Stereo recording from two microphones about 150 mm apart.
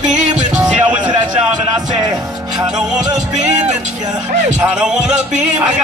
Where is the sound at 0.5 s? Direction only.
5° right (ahead or behind).